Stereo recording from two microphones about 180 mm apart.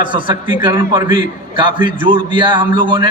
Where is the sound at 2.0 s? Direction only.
25° right (ahead or behind).